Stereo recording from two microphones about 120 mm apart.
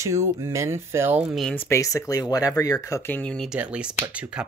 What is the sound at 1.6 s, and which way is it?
Speech, 25° left (ahead or behind).